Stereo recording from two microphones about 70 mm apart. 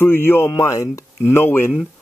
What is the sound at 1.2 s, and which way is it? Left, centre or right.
Speech, left.